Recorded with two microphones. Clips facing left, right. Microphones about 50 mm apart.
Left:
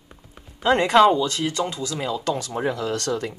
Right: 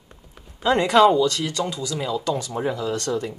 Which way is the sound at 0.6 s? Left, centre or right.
Left.